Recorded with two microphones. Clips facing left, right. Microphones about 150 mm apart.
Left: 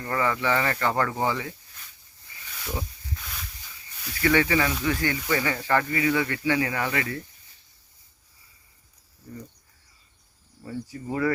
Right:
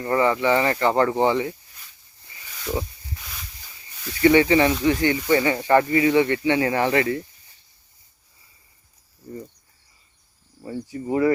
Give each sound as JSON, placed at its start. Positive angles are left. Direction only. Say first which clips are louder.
{"t": 0.0, "sound": "speech", "louder": "right 6 dB", "side_deg": -20}
{"t": 2.6, "sound": "a sound", "louder": "right 6 dB", "side_deg": -10}
{"t": 4.2, "sound": "speech", "louder": "right 7 dB", "side_deg": -20}
{"t": 10.6, "sound": "speech", "louder": "right 4 dB", "side_deg": -20}